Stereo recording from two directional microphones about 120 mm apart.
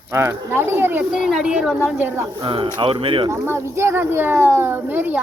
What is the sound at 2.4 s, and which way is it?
Speech, 45° right (ahead or behind).